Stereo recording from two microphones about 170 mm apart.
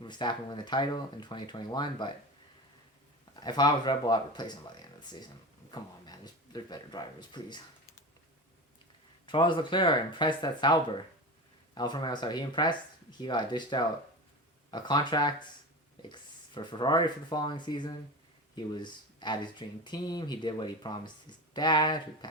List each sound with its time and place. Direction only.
0.0 s speech: 25° left (ahead or behind)
3.4 s speech: 25° left (ahead or behind)
9.2 s speech: 30° left (ahead or behind)